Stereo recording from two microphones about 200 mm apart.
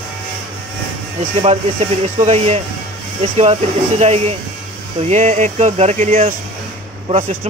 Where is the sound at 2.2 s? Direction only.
35° right (ahead or behind).